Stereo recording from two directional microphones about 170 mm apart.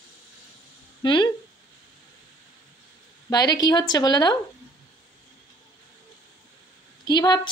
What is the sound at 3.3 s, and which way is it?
A woman's voice, 20° left (ahead or behind).